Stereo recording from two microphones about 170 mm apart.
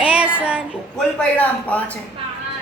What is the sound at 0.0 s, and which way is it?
Child singing, 5° right (ahead or behind).